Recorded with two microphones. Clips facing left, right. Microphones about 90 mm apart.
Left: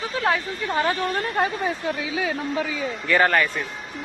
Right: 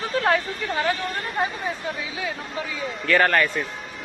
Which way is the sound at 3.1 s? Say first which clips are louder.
Even; 5° left (ahead or behind).